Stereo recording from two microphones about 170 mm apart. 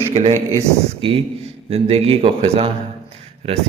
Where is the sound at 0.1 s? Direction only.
40° right (ahead or behind).